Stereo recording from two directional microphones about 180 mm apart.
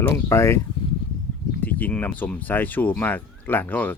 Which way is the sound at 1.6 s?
10° left (ahead or behind).